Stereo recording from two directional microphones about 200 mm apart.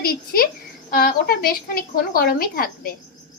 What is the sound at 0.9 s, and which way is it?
A woman's voice, 50° left (ahead or behind).